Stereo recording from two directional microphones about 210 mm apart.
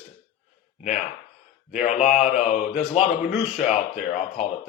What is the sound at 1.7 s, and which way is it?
Speech, 35° left (ahead or behind).